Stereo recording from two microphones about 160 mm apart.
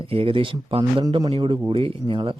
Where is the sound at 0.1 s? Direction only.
35° right (ahead or behind).